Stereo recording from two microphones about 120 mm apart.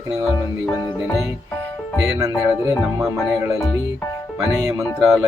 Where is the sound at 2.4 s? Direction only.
20° right (ahead or behind).